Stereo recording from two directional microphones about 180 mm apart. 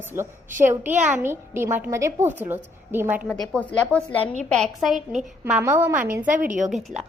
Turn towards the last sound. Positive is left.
turn(degrees=0)  # may be behind; listen again after turning